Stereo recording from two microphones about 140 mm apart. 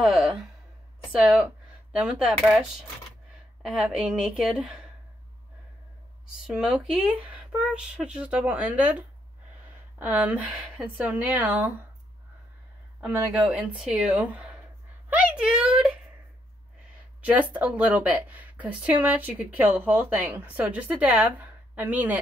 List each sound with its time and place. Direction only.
0.0 s a sound: centre (ahead or behind)
1.2 s speech: 5° right (ahead or behind)
3.6 s a woman's voice: 5° right (ahead or behind)
6.4 s speech: 5° right (ahead or behind)
13.0 s speech: 5° right (ahead or behind)
15.0 s a sound: 10° right (ahead or behind)
17.2 s speech: 10° right (ahead or behind)